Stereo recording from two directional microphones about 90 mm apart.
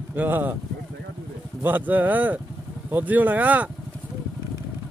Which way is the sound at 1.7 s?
20° right (ahead or behind).